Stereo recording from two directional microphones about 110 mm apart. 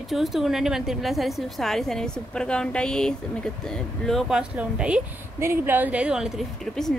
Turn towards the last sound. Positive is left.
turn(degrees=0)  # may be behind; listen again after turning